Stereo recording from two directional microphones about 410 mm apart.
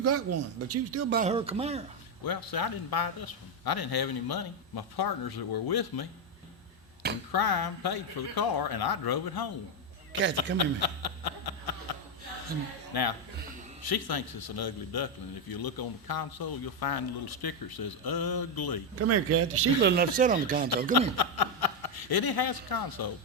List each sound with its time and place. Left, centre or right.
0.0 s speech: right
1.1 s speech: centre
2.2 s a man's voice: left
7.3 s a man's voice: left
10.1 s a man's voice: right
10.3 s a sound: left
12.9 s a man's voice: left
18.9 s speech: right; by 20.7 s centre
21.2 s speech: left